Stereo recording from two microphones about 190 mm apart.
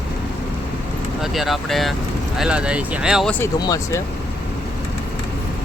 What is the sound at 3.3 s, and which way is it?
Speech, 15° left (ahead or behind).